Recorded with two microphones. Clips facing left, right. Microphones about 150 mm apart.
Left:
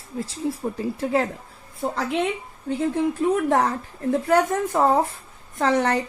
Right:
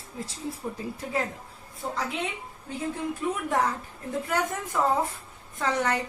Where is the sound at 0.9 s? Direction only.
80° left.